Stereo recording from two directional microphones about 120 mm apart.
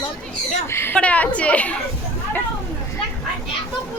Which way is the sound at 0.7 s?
20° left (ahead or behind).